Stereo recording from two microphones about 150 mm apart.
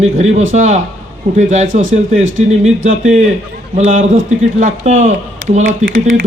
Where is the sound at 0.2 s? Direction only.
50° right (ahead or behind).